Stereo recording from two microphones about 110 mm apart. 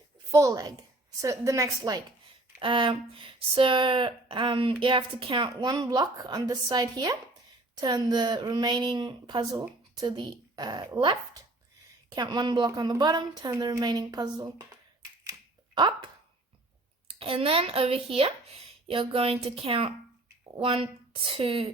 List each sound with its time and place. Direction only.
0.3 s a woman's voice: 30° right (ahead or behind)
2.6 s a woman's voice: 50° right (ahead or behind)
12.1 s a woman's voice: 40° right (ahead or behind)
15.2 s finger snapping: 30° right (ahead or behind)
17.1 s speech: 55° right (ahead or behind)